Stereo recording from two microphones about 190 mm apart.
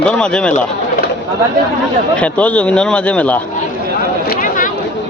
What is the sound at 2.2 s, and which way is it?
A man's voice, 5° left (ahead or behind).